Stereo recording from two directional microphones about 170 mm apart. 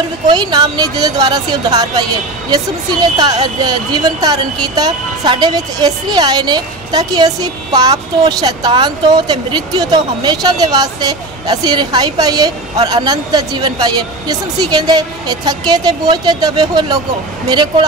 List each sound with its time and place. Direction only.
0.3 s speech: 25° right (ahead or behind)
3.2 s speech: 25° right (ahead or behind)